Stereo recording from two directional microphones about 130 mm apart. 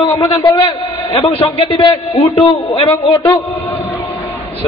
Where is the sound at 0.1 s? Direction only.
25° left (ahead or behind).